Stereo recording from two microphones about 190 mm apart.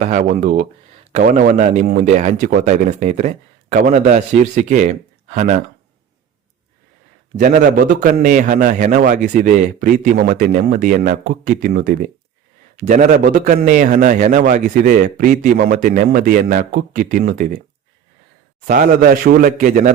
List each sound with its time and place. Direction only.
0.0 s speech: 40° right (ahead or behind)
7.3 s a man's voice: 45° right (ahead or behind)
18.7 s a man's voice: 50° right (ahead or behind)